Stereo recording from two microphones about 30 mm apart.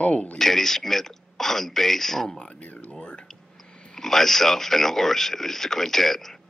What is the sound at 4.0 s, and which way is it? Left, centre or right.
A man's voice, centre.